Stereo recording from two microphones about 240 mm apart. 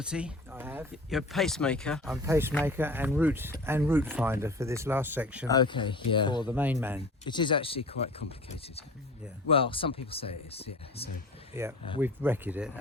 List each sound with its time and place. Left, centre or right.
0.0 s speech: centre
2.2 s speech: centre
5.5 s speech: centre
6.5 s speech: centre
7.3 s speech: centre
11.6 s speech: centre